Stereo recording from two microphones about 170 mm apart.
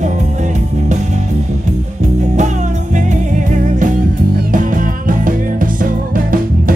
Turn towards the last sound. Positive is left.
turn(degrees=-55)  # may be behind; listen again after turning